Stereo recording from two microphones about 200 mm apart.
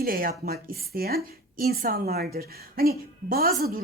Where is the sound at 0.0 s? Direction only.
45° right (ahead or behind).